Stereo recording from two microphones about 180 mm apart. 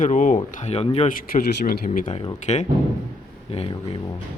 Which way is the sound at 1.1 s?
55° left (ahead or behind).